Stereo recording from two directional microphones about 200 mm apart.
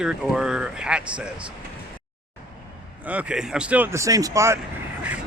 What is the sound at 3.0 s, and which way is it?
Speech, 5° right (ahead or behind).